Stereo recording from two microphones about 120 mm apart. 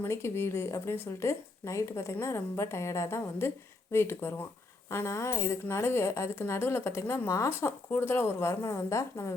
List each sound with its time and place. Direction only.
0.0 s a woman's voice: 20° left (ahead or behind)